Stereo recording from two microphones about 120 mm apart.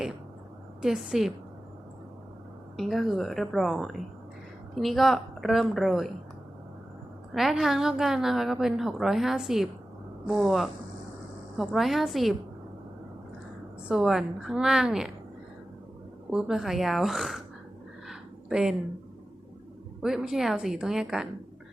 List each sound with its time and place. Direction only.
0.8 s a woman's voice: 5° right (ahead or behind)
2.7 s a woman's voice: centre (ahead or behind)
7.3 s a woman's voice: centre (ahead or behind)
13.8 s a woman's voice: 5° right (ahead or behind)
16.3 s a woman's voice: 5° right (ahead or behind)
18.1 s a sound: 5° right (ahead or behind)
20.0 s a woman's voice: 5° right (ahead or behind)